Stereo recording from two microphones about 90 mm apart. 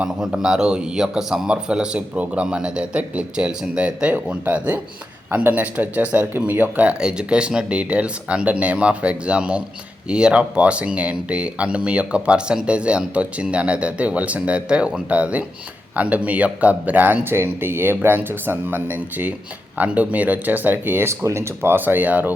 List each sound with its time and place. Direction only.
0.0 s speech: 5° right (ahead or behind)